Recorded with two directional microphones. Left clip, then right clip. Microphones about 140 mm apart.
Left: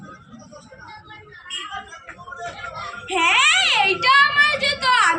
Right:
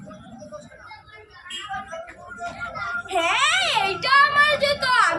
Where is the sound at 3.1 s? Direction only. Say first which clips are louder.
Left 4 dB; 35° right (ahead or behind).